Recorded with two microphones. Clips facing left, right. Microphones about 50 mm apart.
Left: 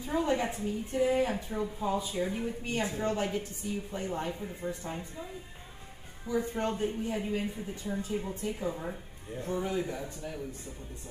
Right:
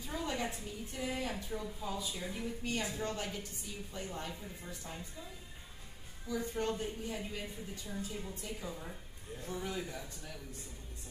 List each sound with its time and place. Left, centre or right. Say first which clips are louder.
0.0 s a woman's voice: left 8 dB; left
6.2 s a woman's voice: left 5 dB; left